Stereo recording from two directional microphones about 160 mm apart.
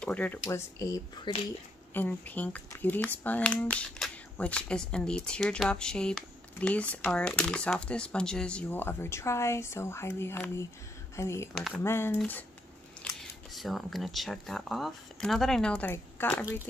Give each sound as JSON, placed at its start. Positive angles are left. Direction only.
{"t": 0.0, "sound": "speech", "side_deg": 10}
{"t": 1.3, "sound": "speech", "side_deg": 30}
{"t": 2.0, "sound": "speech", "side_deg": 10}
{"t": 11.5, "sound": "speech", "side_deg": 0}
{"t": 11.8, "sound": "speech", "side_deg": 15}